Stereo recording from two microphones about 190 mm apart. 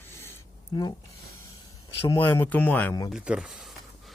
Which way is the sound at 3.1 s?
5° right (ahead or behind).